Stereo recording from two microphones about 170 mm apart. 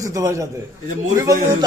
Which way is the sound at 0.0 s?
20° right (ahead or behind).